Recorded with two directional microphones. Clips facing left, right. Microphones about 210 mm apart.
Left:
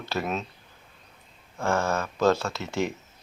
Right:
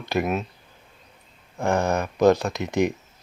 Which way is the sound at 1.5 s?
15° right (ahead or behind).